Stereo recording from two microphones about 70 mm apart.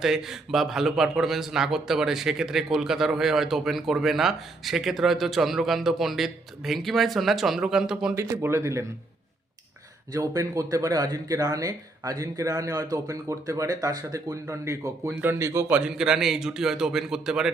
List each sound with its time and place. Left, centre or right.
0.0 s a man's voice: centre
8.1 s speech: right
10.1 s speech: right
15.7 s speech: centre